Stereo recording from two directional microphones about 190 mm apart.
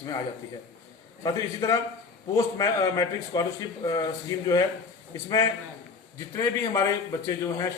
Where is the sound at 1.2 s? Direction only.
20° left (ahead or behind).